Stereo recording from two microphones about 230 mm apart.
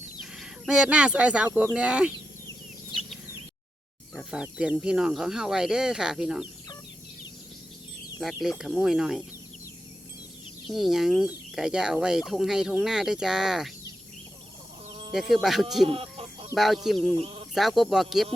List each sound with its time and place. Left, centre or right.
0.2 s speech: centre
2.9 s a sound: centre
4.1 s speech: centre
8.2 s speech: centre
10.7 s speech: centre
15.1 s speech: centre
15.9 s chicken: right
16.6 s speech: centre